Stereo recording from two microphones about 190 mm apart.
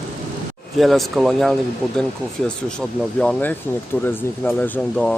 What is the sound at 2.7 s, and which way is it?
Speech, 5° left (ahead or behind).